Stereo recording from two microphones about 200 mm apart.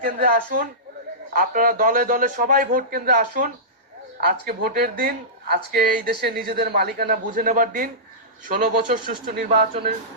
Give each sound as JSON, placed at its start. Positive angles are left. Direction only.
{"t": 0.0, "sound": "speech", "side_deg": -45}